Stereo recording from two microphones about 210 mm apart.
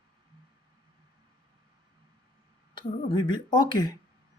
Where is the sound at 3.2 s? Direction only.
20° left (ahead or behind).